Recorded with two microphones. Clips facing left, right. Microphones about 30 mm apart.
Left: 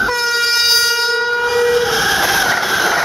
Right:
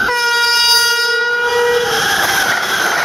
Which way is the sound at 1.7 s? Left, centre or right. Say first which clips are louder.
Even; right.